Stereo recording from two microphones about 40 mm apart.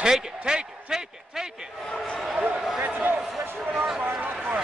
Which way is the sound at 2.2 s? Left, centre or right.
Centre.